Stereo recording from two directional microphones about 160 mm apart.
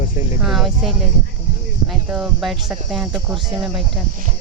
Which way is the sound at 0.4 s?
Centre (ahead or behind).